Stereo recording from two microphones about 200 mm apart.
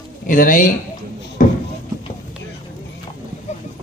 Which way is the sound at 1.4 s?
40° left (ahead or behind).